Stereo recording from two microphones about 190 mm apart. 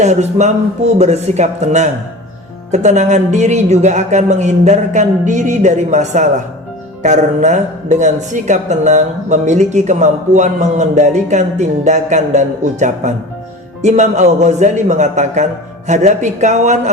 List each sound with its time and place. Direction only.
0.0 s a woman's voice: 40° right (ahead or behind)